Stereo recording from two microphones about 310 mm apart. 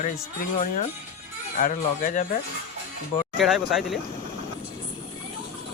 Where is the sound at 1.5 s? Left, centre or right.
Left.